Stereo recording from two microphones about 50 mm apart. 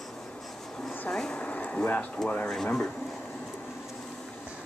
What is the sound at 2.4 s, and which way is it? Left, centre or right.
Speech, centre.